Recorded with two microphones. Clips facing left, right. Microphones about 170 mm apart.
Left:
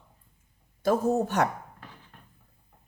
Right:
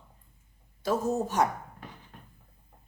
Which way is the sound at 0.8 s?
60° left (ahead or behind).